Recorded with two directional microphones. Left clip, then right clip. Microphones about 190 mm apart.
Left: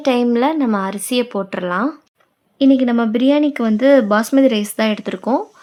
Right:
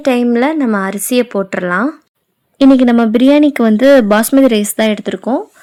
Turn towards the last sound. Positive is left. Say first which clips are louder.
# right 3 dB
turn(degrees=-15)  # may be behind; listen again after turning